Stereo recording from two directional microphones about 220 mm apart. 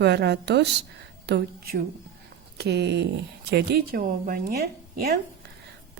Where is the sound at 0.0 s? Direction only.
50° right (ahead or behind).